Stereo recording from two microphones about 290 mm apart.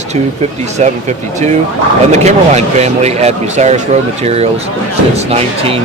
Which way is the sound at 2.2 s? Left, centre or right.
Right.